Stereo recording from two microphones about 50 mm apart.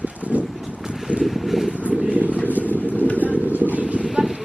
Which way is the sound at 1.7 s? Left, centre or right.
Right.